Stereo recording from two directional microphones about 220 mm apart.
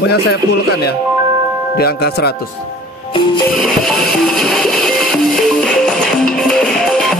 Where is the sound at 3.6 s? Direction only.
Centre (ahead or behind).